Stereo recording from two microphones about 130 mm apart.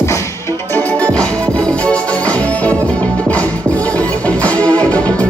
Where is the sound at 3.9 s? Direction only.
10° left (ahead or behind).